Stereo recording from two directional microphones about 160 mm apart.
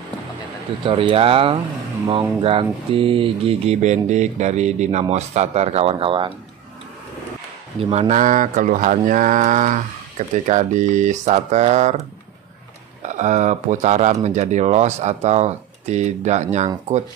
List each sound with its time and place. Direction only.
0.8 s speech: 35° right (ahead or behind)
7.8 s speech: 40° right (ahead or behind)
13.0 s speech: 50° right (ahead or behind)